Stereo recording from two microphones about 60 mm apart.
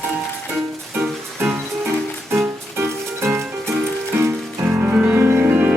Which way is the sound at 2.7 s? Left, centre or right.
Right.